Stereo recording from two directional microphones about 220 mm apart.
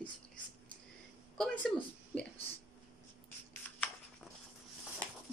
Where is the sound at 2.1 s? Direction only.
5° left (ahead or behind).